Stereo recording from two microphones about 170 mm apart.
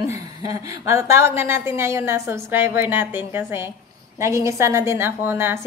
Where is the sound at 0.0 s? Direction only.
20° right (ahead or behind).